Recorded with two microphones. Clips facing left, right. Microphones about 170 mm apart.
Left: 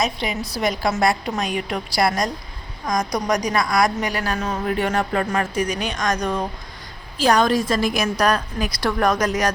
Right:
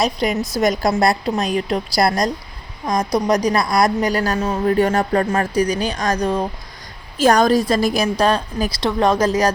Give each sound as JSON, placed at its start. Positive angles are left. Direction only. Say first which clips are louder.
{"t": 0.0, "sound": "a woman's voice", "louder": "right 5 dB", "side_deg": -40}
{"t": 7.2, "sound": "a woman's voice", "louder": "right 3 dB", "side_deg": -45}
{"t": 8.8, "sound": "speech", "louder": "right 3 dB", "side_deg": -25}